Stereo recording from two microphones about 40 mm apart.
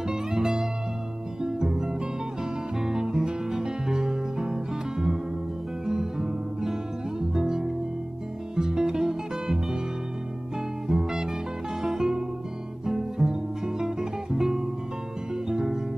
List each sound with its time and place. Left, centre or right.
0.1 s music: centre
10.9 s music: centre